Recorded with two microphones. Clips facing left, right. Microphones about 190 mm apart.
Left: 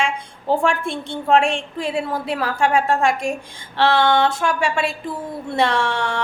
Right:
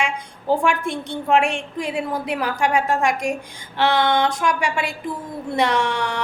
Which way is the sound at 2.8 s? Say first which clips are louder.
Left 2 dB; 30° left (ahead or behind).